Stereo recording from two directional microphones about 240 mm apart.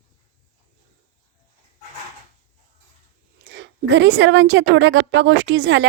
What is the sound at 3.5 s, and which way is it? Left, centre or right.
A woman's voice, right.